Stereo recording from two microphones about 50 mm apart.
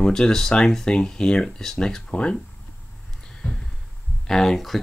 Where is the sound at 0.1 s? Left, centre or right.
Centre.